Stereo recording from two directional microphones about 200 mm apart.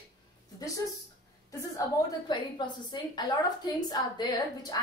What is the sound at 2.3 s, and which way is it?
A woman's voice, 20° left (ahead or behind).